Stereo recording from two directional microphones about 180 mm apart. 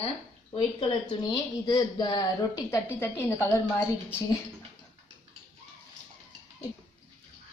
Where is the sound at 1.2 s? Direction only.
20° left (ahead or behind).